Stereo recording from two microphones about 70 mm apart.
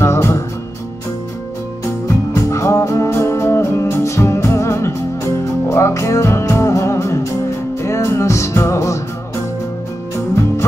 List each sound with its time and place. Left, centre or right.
0.0 s music: left
2.5 s music: left